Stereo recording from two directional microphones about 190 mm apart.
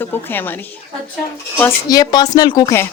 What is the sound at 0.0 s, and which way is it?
A woman's voice, 10° left (ahead or behind).